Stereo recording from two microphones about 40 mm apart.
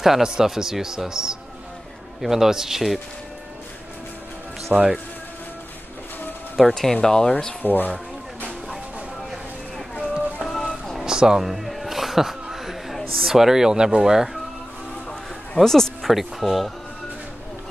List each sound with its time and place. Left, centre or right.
0.0 s a man's voice: centre
4.7 s a man's voice: centre
6.5 s speech: centre
7.6 s speech: left
10.5 s music: centre
11.1 s a sound: centre
15.5 s a sound: centre
16.1 s speech: centre